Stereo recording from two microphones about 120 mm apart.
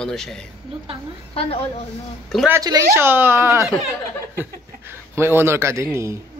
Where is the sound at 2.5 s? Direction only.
30° right (ahead or behind).